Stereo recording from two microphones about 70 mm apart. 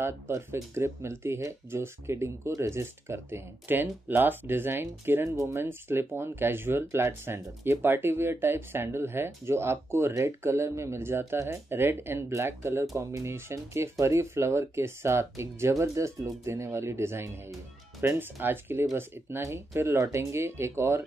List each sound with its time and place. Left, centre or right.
0.0 s speech: right
5.3 s speech: right